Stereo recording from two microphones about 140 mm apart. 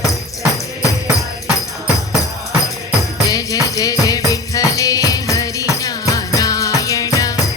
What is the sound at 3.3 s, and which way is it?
Music, 25° left (ahead or behind).